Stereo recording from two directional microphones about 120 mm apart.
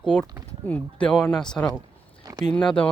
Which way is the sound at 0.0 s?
5° left (ahead or behind).